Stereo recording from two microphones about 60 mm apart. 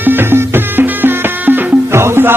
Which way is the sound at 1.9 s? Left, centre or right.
Right.